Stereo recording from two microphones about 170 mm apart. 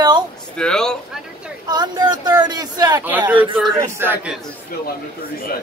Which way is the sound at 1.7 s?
25° right (ahead or behind).